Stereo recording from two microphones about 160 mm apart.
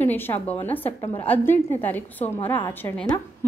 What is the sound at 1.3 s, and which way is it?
A woman's voice, 10° left (ahead or behind).